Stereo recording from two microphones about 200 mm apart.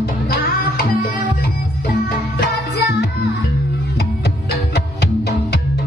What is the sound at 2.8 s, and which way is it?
Music, 50° left (ahead or behind).